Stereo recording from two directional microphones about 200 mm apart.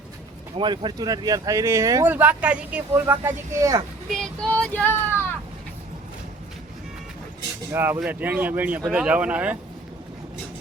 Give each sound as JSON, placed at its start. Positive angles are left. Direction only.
{"t": 0.5, "sound": "speech", "side_deg": -25}
{"t": 4.1, "sound": "child singing", "side_deg": 0}
{"t": 7.7, "sound": "speech", "side_deg": -10}